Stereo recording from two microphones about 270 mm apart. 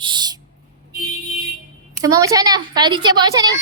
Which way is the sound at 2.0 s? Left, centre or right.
Centre.